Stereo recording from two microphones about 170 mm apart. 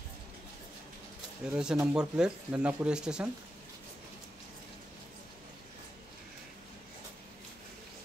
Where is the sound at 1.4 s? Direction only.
5° right (ahead or behind).